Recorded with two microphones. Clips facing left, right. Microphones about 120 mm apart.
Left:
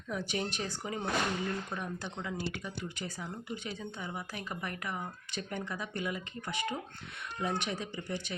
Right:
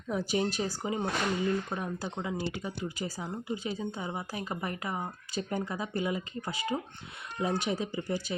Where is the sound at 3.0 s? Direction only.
30° right (ahead or behind).